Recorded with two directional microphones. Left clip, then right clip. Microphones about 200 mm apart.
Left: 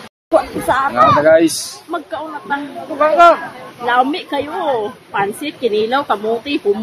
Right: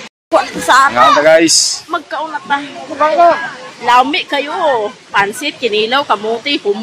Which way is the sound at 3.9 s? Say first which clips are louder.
Right 5 dB; 10° left (ahead or behind).